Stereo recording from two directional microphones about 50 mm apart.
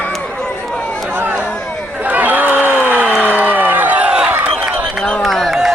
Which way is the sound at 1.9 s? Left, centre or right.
Right.